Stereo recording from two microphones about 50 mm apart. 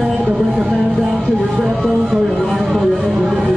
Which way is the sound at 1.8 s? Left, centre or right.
Centre.